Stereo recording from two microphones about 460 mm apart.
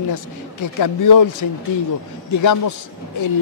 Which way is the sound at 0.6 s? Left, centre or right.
Left.